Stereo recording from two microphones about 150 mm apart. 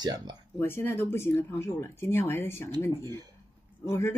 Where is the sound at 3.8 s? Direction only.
15° left (ahead or behind).